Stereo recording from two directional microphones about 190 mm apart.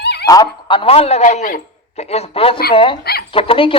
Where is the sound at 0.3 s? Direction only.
20° left (ahead or behind); by 2.0 s 40° left (ahead or behind).